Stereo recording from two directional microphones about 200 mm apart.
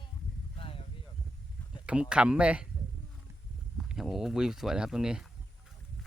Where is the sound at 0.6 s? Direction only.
25° left (ahead or behind).